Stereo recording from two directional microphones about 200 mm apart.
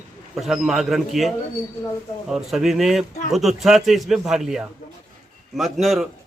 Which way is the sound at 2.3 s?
Centre (ahead or behind).